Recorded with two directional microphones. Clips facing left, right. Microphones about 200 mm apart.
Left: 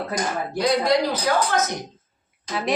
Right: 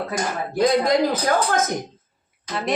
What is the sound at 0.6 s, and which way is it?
A woman's voice, 50° right (ahead or behind).